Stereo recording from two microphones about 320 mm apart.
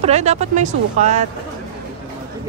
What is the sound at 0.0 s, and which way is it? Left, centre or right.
Speech, right.